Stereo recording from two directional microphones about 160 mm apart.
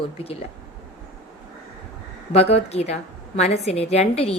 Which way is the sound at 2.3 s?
40° left (ahead or behind).